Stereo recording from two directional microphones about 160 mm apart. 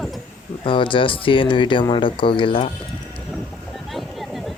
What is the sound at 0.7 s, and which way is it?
Speech, 30° left (ahead or behind).